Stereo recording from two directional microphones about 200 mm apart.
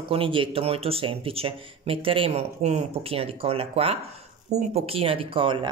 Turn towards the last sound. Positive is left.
turn(degrees=-25)  # may be behind; listen again after turning